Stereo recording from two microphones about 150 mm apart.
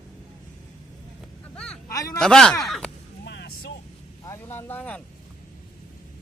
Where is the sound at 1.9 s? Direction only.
25° left (ahead or behind).